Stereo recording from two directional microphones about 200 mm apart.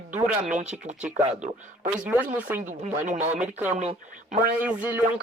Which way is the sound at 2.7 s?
40° right (ahead or behind).